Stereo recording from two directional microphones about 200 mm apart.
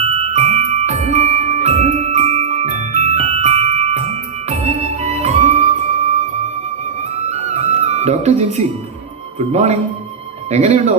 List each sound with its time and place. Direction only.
0.0 s music: 30° right (ahead or behind)
7.3 s music: 35° right (ahead or behind)
9.5 s speech: 35° right (ahead or behind)